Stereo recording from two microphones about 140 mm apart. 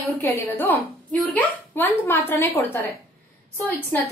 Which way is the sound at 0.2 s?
15° left (ahead or behind).